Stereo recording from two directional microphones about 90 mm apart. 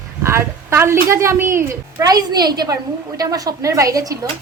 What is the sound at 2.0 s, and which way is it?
A woman's voice, 50° right (ahead or behind).